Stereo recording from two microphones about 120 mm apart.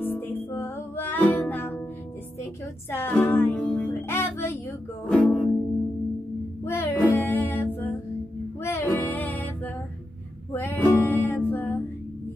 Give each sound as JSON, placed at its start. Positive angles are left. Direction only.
{"t": 0.0, "sound": "music", "side_deg": 15}
{"t": 2.9, "sound": "music", "side_deg": 15}
{"t": 4.1, "sound": "music", "side_deg": 20}
{"t": 5.0, "sound": "music", "side_deg": 10}
{"t": 6.6, "sound": "music", "side_deg": 20}
{"t": 10.5, "sound": "music", "side_deg": 15}